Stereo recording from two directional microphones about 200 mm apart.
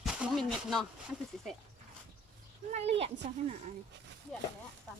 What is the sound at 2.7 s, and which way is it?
Speech, 30° right (ahead or behind).